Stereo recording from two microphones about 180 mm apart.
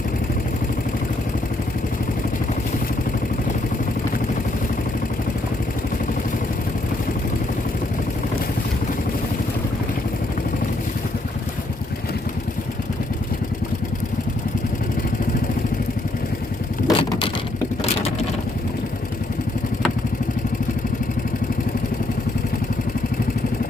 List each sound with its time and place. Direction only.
16.8 s vehicle: 30° left (ahead or behind)